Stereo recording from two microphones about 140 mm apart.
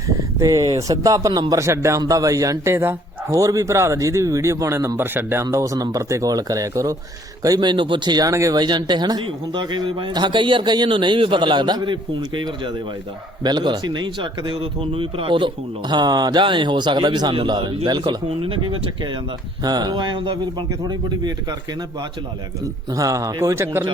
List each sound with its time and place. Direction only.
0.3 s a man's voice: 25° right (ahead or behind)
19.6 s a man's voice: 30° right (ahead or behind)
22.6 s a man's voice: 25° right (ahead or behind)